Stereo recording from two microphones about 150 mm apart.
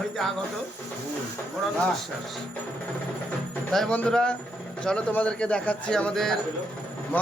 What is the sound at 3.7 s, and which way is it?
A man's voice, 5° left (ahead or behind).